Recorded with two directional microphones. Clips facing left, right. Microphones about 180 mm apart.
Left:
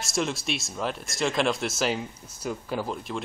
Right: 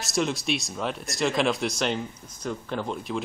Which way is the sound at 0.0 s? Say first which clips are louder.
Right 2 dB; centre (ahead or behind).